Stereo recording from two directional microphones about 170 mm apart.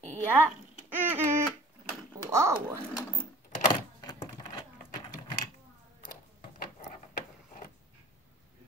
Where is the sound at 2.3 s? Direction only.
15° right (ahead or behind).